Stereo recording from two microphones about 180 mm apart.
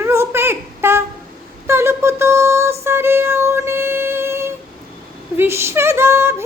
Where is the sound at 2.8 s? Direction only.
15° right (ahead or behind).